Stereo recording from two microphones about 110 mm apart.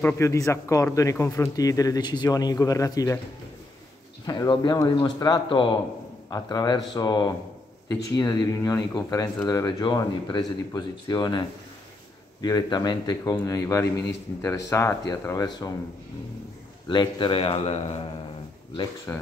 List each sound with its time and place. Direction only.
0.0 s speech: 25° left (ahead or behind)
4.3 s speech: 40° left (ahead or behind)
16.9 s a man's voice: 45° left (ahead or behind)
17.6 s speech: 85° left
19.1 s speech: 20° left (ahead or behind)